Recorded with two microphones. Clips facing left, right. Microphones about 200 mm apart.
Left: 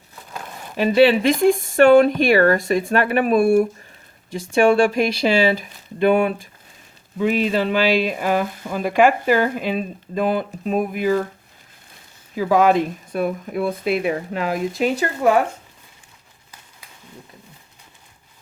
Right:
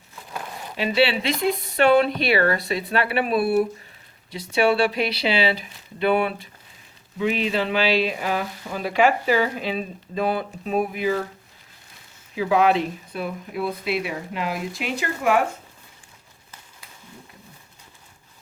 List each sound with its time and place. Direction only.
0.8 s speech: 45° left (ahead or behind)
12.4 s speech: 45° left (ahead or behind)